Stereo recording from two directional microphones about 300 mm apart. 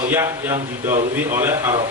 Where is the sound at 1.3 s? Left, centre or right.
Centre.